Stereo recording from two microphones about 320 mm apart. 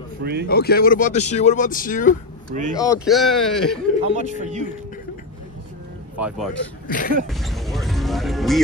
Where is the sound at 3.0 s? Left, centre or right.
Centre.